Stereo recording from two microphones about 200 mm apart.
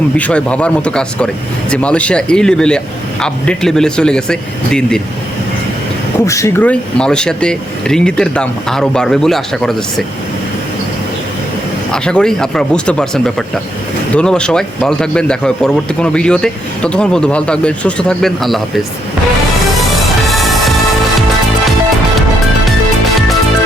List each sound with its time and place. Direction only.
0.2 s a man's voice: 5° left (ahead or behind)
6.1 s a man's voice: 15° left (ahead or behind)
11.9 s a man's voice: 5° left (ahead or behind)
20.2 s music: centre (ahead or behind)